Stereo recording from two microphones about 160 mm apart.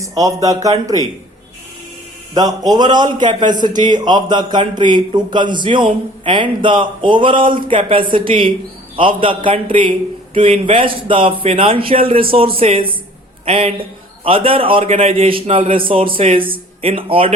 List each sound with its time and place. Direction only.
0.0 s a man's voice: 20° right (ahead or behind)
2.3 s a man's voice: 25° right (ahead or behind)